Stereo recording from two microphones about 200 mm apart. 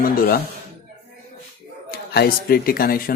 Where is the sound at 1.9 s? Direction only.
50° left (ahead or behind).